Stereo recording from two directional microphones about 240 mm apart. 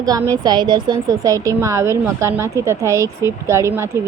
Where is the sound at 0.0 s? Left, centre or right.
Centre.